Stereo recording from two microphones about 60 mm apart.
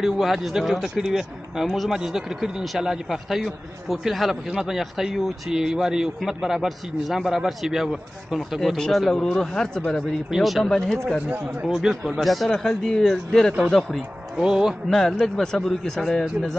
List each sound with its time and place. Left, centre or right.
0.0 s speech: centre
10.3 s speech: centre
10.7 s speech: centre
11.2 s speech: right
11.6 s a man's voice: centre
14.9 s speech: centre